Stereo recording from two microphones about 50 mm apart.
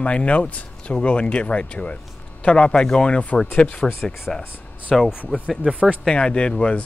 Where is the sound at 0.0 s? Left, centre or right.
Left.